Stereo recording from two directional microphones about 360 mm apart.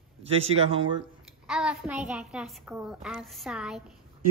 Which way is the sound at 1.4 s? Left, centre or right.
Centre.